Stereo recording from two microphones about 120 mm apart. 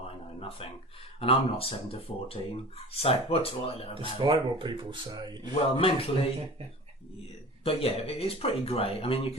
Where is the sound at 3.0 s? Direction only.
55° left (ahead or behind).